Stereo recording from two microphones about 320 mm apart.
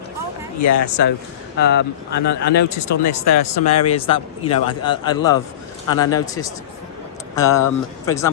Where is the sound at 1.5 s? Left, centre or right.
Left.